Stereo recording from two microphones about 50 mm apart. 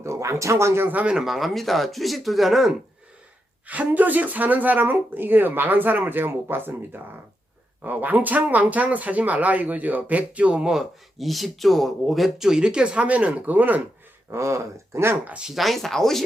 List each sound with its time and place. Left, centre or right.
0.0 s speech: right
1.2 s speech: centre
3.7 s speech: right; by 10.8 s centre
11.2 s speech: centre
12.5 s speech: centre; by 13.8 s right
14.3 s speech: right
15.5 s speech: centre